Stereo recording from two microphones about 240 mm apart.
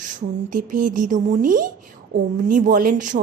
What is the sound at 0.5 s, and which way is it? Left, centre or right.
A woman's voice, right.